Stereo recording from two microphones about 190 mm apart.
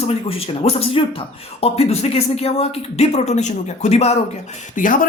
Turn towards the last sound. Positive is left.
turn(degrees=45)  # may be behind; listen again after turning